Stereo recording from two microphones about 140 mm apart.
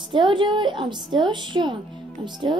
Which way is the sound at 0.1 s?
35° right (ahead or behind).